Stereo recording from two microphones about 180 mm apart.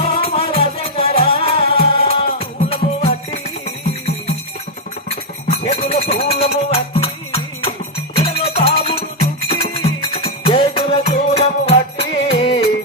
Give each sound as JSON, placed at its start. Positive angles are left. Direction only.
{"t": 0.0, "sound": "music", "side_deg": 35}
{"t": 5.5, "sound": "music", "side_deg": 35}
{"t": 8.2, "sound": "music", "side_deg": 35}